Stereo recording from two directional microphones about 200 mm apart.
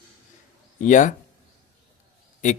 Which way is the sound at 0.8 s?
40° left (ahead or behind).